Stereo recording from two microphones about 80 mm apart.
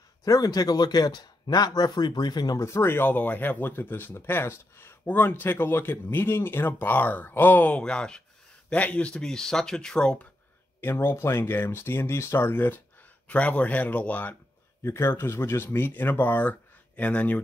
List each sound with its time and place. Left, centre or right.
0.2 s a man's voice: left
2.6 s speech: left; by 10.2 s centre
10.8 s speech: left
14.8 s speech: left; by 17.4 s centre